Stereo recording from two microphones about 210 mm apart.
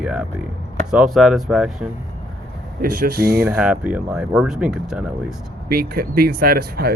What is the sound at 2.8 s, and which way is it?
Speech, 45° right (ahead or behind).